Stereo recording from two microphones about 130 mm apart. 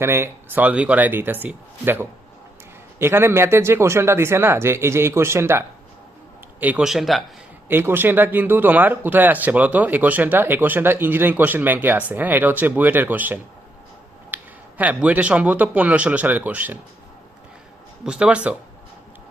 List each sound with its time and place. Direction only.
0.0 s speech: 20° right (ahead or behind); by 7.3 s centre (ahead or behind)
7.7 s speech: 15° right (ahead or behind)
14.3 s a sound: 15° right (ahead or behind)
14.8 s speech: 10° right (ahead or behind)
18.0 s speech: 5° right (ahead or behind)